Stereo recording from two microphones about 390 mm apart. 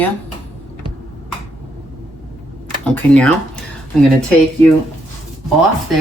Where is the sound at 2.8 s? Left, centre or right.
Centre.